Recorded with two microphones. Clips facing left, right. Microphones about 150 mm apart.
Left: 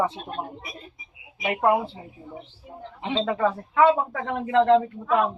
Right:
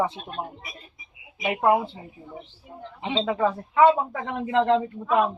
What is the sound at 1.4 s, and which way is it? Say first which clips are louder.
Speech: left 1 dB; 5° right (ahead or behind).